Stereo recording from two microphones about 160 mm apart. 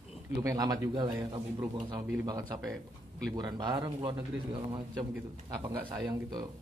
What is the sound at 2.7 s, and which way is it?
Speech, centre (ahead or behind).